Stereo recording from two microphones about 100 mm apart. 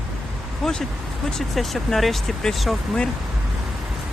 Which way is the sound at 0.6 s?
5° left (ahead or behind).